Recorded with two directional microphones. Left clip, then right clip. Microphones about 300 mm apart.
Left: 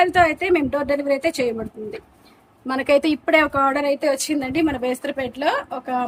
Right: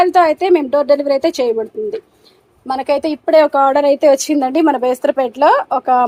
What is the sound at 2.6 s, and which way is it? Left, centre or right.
Speech, centre.